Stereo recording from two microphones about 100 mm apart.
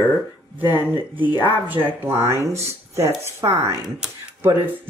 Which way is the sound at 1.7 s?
20° right (ahead or behind).